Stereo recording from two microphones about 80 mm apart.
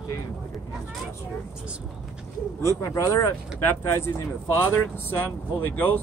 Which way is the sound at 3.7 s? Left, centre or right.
Left.